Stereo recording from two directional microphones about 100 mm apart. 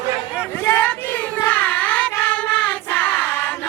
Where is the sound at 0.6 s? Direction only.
20° left (ahead or behind).